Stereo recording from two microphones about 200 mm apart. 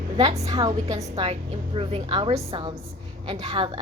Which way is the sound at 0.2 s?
20° right (ahead or behind).